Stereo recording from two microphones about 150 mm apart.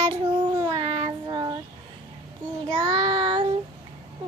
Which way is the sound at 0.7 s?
35° right (ahead or behind).